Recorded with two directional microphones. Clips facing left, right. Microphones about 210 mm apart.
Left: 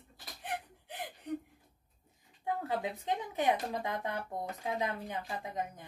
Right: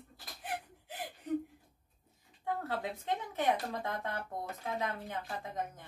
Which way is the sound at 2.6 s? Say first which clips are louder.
Left 2 dB; 15° left (ahead or behind).